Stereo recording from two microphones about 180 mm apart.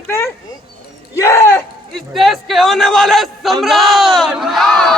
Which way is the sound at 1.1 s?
15° left (ahead or behind).